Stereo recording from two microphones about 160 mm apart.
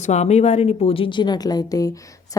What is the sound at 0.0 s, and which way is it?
A woman's voice, 45° left (ahead or behind).